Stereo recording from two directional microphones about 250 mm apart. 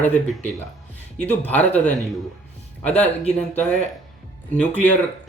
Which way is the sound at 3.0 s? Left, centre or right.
Centre.